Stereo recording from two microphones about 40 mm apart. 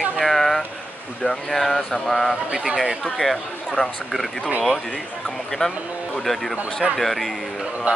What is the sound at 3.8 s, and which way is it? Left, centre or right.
Speech, left.